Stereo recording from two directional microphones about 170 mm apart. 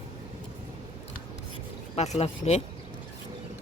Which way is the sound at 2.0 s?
40° left (ahead or behind).